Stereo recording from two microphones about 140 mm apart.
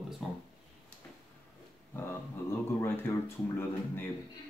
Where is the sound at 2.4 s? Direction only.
15° left (ahead or behind).